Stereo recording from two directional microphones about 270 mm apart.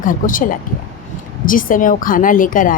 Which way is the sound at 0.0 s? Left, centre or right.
Left.